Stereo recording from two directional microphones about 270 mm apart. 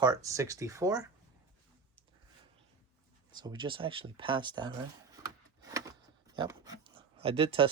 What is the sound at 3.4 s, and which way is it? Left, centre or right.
Speech, centre.